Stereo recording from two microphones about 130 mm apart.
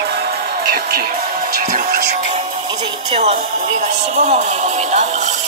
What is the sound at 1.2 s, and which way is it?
Music, 90° right.